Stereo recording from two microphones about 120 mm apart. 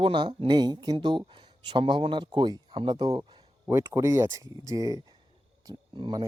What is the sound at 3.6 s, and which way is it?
Speech, 20° right (ahead or behind).